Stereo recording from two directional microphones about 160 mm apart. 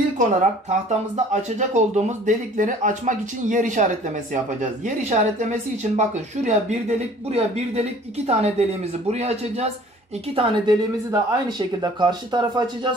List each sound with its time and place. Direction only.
0.2 s speech: 50° right (ahead or behind); by 12.9 s 25° right (ahead or behind)